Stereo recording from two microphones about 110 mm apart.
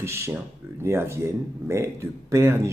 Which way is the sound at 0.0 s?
25° right (ahead or behind).